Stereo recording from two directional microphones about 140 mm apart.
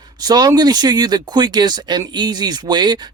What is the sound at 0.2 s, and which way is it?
Speech, 30° right (ahead or behind).